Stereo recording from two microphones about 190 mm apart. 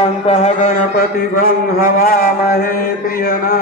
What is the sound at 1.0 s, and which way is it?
Mantra, 50° left (ahead or behind).